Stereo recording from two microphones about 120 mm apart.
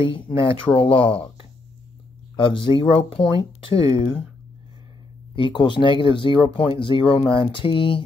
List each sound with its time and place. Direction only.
0.0 s speech: 45° left (ahead or behind)
2.3 s speech: 45° left (ahead or behind)
5.3 s speech: 40° left (ahead or behind)